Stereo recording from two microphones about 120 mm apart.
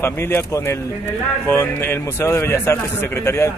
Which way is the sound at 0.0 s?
20° left (ahead or behind).